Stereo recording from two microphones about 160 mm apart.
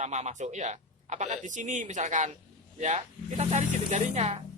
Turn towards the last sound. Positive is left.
turn(degrees=-45)  # may be behind; listen again after turning